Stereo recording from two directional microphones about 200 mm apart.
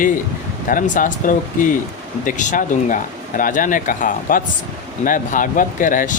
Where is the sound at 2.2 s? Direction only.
40° left (ahead or behind).